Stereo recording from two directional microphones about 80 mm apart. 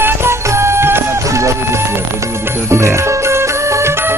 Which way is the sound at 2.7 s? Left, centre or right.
Right.